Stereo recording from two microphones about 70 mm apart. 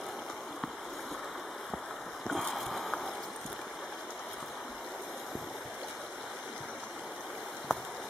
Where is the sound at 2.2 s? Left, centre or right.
Centre.